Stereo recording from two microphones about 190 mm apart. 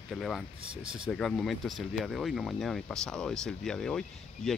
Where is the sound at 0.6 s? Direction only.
30° right (ahead or behind).